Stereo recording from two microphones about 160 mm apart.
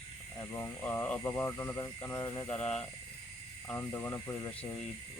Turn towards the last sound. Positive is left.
turn(degrees=20)  # may be behind; listen again after turning